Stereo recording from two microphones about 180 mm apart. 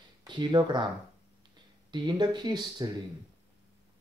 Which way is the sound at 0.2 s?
25° right (ahead or behind).